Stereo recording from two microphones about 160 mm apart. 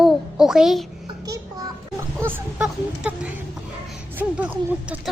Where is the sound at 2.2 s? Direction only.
10° right (ahead or behind).